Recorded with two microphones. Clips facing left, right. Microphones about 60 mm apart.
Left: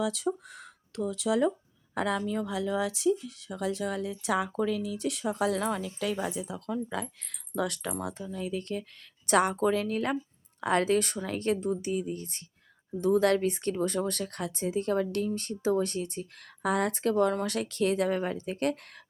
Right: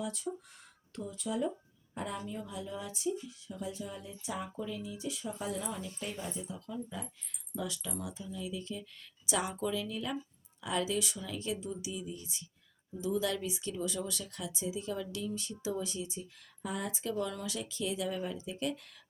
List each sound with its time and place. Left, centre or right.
0.0 s speech: left